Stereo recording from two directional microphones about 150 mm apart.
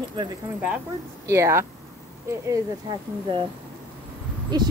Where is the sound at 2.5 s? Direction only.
30° right (ahead or behind).